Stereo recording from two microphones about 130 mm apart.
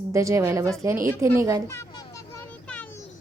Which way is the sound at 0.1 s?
25° right (ahead or behind).